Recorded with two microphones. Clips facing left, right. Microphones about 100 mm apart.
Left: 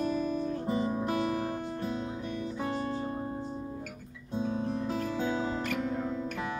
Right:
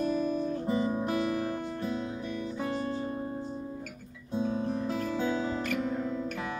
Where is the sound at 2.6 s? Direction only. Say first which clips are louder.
Even; centre (ahead or behind).